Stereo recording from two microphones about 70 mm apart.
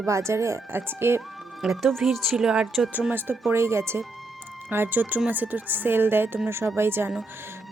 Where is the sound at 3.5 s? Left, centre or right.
Right.